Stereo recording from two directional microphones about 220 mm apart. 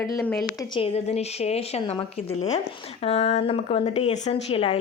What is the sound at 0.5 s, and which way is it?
A woman's voice, 25° left (ahead or behind).